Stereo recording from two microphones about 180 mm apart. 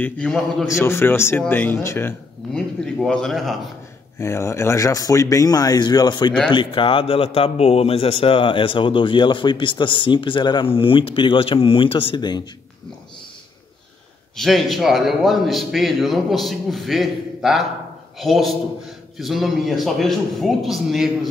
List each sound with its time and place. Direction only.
0.0 s a man's voice: 5° left (ahead or behind)
4.2 s speech: 15° left (ahead or behind)
14.3 s a man's voice: centre (ahead or behind)